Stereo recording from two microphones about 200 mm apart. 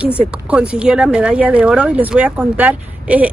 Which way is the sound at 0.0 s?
5° right (ahead or behind).